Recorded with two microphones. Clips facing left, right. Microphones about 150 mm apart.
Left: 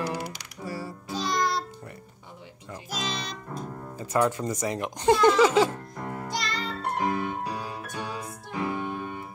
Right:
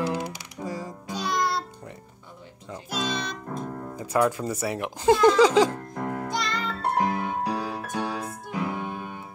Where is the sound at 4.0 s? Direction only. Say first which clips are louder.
Right 1 dB; 10° right (ahead or behind).